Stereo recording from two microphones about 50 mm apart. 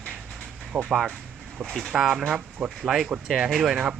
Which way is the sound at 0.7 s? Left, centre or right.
Centre.